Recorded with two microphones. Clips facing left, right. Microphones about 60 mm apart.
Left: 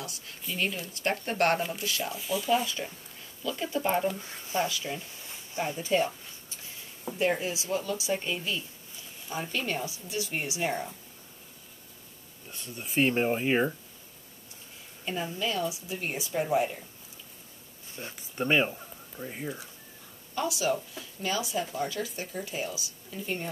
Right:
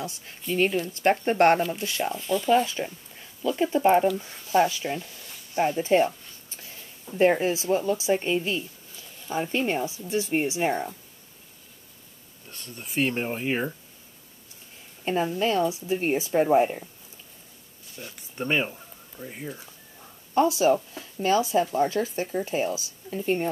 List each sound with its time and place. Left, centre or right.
0.0 s speech: right
2.1 s speech: centre
2.6 s speech: right
5.1 s a sound: left
5.6 s speech: right
7.2 s speech: right
12.4 s speech: centre
15.0 s speech: right
18.1 s speech: centre
20.3 s speech: right